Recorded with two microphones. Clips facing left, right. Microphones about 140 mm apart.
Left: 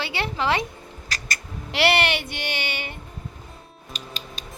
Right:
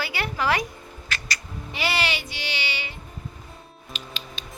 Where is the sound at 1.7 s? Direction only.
75° left (ahead or behind); by 2.9 s 50° left (ahead or behind).